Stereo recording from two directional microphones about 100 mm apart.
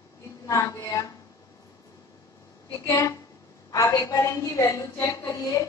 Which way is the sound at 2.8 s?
30° left (ahead or behind).